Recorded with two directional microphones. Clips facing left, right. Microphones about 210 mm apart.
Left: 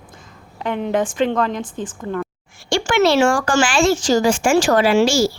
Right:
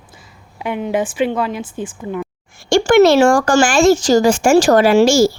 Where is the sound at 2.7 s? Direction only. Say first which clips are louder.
Right 6 dB; 40° right (ahead or behind).